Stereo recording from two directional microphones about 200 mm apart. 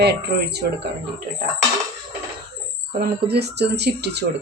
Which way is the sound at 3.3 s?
55° right (ahead or behind).